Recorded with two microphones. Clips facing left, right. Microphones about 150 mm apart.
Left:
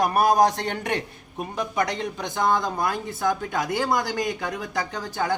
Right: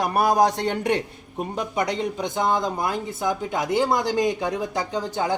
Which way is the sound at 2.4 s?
20° right (ahead or behind).